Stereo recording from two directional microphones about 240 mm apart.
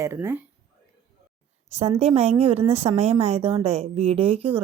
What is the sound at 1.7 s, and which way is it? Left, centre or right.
A woman's voice, right.